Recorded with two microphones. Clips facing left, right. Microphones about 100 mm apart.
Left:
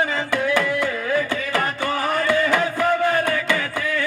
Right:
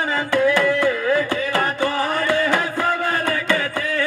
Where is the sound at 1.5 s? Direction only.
30° right (ahead or behind).